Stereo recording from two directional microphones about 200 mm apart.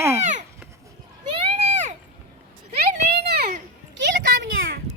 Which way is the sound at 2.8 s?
55° right (ahead or behind).